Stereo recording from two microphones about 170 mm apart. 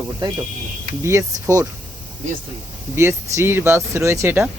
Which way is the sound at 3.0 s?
15° right (ahead or behind).